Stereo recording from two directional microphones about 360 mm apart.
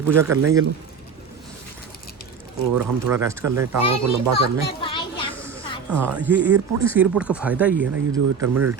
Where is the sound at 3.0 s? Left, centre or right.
Centre.